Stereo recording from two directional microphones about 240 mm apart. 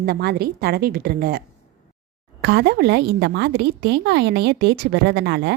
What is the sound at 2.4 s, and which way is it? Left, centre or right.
A woman's voice, right.